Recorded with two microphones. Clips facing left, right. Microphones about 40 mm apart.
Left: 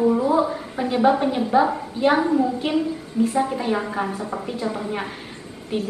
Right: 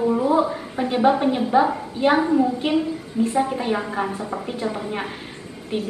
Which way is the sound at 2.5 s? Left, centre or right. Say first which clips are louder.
Right 1 dB; centre.